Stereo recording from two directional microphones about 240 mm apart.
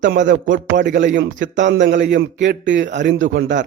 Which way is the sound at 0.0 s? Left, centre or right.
Right.